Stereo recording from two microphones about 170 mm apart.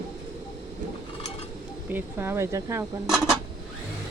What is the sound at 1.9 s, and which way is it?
Speech, 15° right (ahead or behind).